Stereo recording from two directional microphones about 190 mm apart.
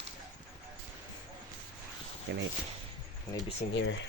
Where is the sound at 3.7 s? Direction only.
85° left.